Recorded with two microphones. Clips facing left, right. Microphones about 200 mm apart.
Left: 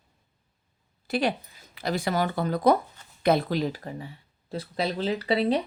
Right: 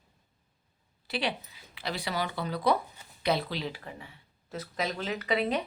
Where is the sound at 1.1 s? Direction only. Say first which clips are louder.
Left 6 dB; 45° left (ahead or behind).